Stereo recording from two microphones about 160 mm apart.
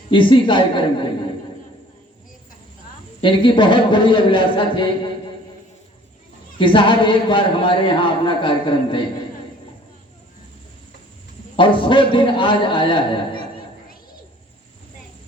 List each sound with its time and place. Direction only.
0.1 s a man's voice: 30° left (ahead or behind)
3.2 s a man's voice: 30° left (ahead or behind)
6.6 s a man's voice: 30° left (ahead or behind)
11.5 s a man's voice: 30° left (ahead or behind)